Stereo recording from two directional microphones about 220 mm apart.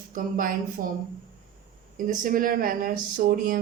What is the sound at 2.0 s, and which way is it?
Speech, 40° right (ahead or behind).